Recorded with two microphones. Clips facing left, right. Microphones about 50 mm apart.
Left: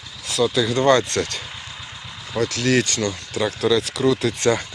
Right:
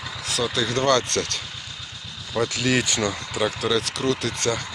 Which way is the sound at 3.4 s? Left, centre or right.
Centre.